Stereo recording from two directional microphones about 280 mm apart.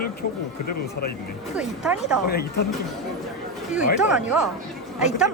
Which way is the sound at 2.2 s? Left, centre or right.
Left.